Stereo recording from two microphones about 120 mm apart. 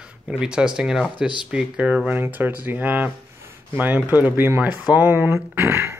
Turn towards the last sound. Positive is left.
turn(degrees=-25)  # may be behind; listen again after turning